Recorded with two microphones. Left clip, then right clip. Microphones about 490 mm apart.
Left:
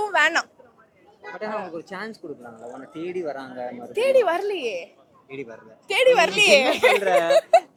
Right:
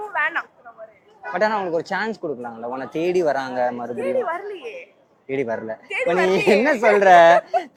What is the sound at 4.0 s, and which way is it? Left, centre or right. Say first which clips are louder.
Speech: left 5 dB; left.